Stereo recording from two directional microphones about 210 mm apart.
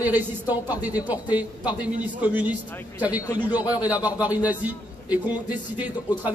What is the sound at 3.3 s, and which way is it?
Speech, 20° left (ahead or behind).